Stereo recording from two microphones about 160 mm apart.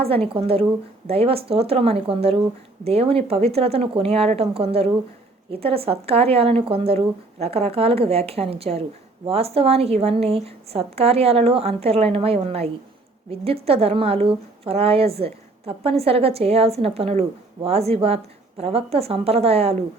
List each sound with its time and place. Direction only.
0.0 s a woman's voice: 35° right (ahead or behind)